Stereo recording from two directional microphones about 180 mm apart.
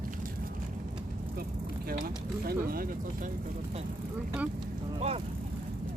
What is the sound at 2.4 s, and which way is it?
Speech, 55° right (ahead or behind).